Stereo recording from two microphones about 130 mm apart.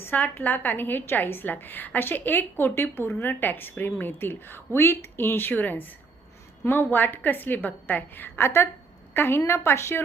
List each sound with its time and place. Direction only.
0.0 s a woman's voice: 15° left (ahead or behind)